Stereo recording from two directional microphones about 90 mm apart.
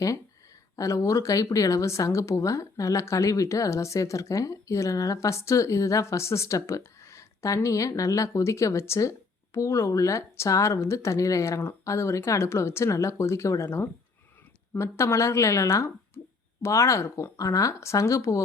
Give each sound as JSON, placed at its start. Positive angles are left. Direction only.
{"t": 0.8, "sound": "speech", "side_deg": 35}